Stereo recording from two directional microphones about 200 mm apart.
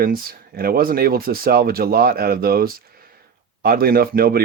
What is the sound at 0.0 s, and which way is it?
Speech, 45° right (ahead or behind).